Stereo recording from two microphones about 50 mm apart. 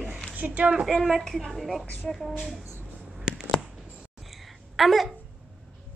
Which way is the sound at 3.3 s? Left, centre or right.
Centre.